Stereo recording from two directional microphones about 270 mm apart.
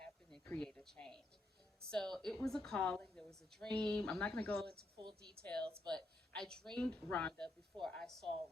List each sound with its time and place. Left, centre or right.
0.0 s a sound: centre
1.8 s a woman's voice: centre
5.6 s speech: centre
5.9 s a woman's voice: centre